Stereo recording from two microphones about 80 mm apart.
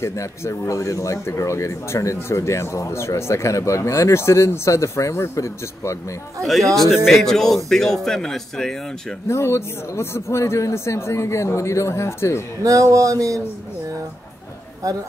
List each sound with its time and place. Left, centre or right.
0.0 s speech: left
6.4 s a man's voice: centre
9.3 s speech: left
12.6 s a sound: right